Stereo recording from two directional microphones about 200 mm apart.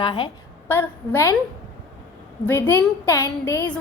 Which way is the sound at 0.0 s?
25° left (ahead or behind).